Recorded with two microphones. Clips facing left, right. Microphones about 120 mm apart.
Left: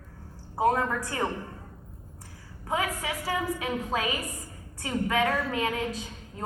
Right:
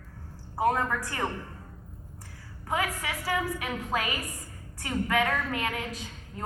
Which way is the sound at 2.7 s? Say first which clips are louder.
Left 1 dB; 25° left (ahead or behind).